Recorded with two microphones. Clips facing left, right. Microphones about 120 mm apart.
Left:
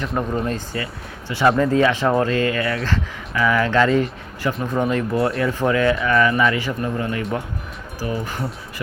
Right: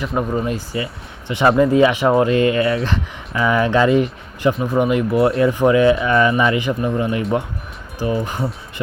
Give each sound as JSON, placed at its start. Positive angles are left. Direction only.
{"t": 0.0, "sound": "speech", "side_deg": -10}